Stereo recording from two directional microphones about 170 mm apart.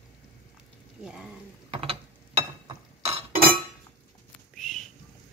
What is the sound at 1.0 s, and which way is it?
Speech, 5° right (ahead or behind).